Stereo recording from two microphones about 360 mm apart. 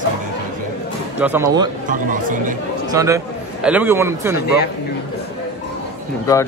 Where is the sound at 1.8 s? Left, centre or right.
Right.